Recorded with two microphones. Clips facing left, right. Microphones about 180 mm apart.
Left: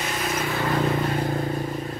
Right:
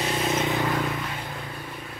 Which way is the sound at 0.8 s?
40° left (ahead or behind).